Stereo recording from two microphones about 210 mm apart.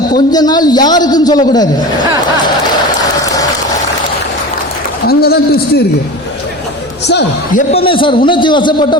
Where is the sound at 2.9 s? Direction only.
15° left (ahead or behind).